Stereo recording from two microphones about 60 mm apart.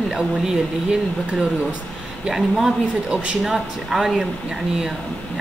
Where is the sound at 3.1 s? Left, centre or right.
Centre.